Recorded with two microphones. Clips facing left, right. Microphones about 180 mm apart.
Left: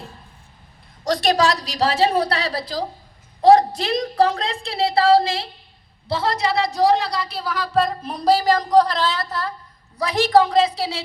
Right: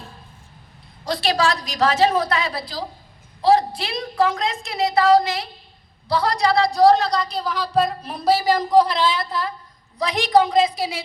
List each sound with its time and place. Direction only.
1.0 s a woman's voice: 45° left (ahead or behind); by 6.7 s 20° left (ahead or behind)
6.9 s a woman's voice: 10° left (ahead or behind); by 11.0 s 15° right (ahead or behind)